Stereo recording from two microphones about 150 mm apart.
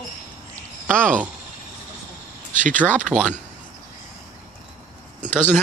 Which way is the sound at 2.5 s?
60° right (ahead or behind).